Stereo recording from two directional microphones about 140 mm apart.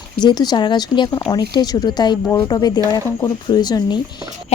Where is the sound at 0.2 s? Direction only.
30° left (ahead or behind).